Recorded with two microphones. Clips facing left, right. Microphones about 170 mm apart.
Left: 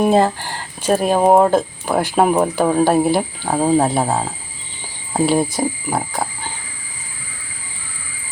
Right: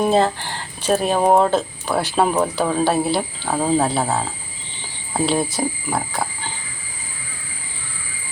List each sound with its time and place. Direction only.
0.0 s speech: 10° left (ahead or behind)
5.9 s frog: 15° left (ahead or behind)